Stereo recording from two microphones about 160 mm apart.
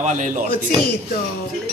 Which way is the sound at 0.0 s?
50° right (ahead or behind).